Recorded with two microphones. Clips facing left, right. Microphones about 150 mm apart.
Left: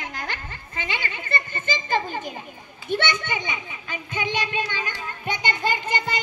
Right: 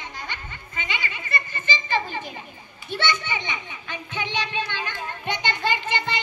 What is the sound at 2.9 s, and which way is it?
Children playing, 50° left (ahead or behind).